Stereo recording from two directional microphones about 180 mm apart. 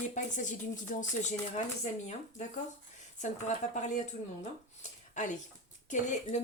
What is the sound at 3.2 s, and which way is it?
Speech, 40° left (ahead or behind).